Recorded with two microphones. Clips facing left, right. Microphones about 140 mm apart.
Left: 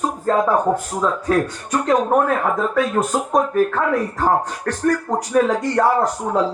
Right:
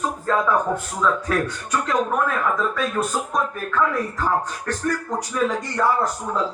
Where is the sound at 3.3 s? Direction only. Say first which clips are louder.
Left 7 dB; 60° left (ahead or behind).